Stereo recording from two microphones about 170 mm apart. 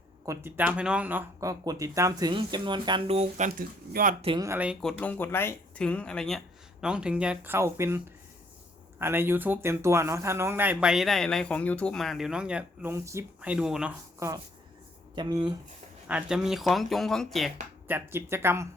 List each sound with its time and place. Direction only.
0.3 s speech: 10° right (ahead or behind); by 4.1 s 55° right (ahead or behind)
4.4 s speech: 15° right (ahead or behind)
4.8 s speech: 5° left (ahead or behind)
15.1 s speech: 25° right (ahead or behind)
16.0 s speech: 5° right (ahead or behind)
17.8 s speech: 15° right (ahead or behind)